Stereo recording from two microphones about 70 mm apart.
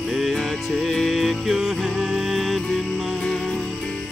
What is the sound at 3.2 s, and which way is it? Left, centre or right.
Music, centre.